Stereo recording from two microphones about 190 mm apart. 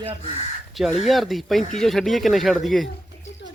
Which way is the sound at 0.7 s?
Centre (ahead or behind).